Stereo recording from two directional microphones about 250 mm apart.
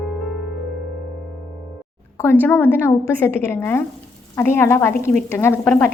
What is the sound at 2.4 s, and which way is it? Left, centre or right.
A woman's voice, centre.